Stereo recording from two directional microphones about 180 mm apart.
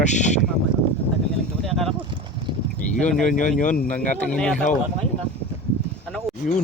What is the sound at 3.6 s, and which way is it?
Speech, 45° left (ahead or behind).